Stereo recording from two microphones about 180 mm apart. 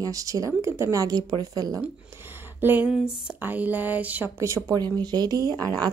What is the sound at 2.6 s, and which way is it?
A woman's voice, 10° right (ahead or behind).